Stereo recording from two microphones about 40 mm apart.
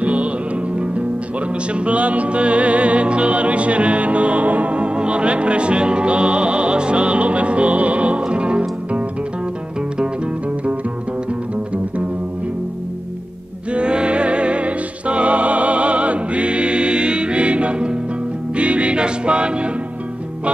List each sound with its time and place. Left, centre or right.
0.0 s music: right
13.7 s music: right